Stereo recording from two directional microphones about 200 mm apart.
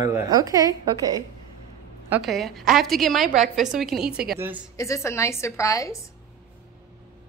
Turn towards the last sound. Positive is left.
turn(degrees=15)  # may be behind; listen again after turning